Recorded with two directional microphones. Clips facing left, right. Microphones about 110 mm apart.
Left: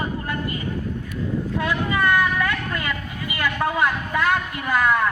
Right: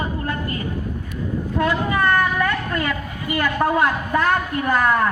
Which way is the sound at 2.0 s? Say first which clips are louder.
Right 1 dB; 10° right (ahead or behind).